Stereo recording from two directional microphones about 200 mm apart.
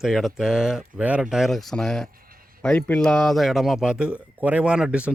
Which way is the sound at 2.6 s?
5° left (ahead or behind).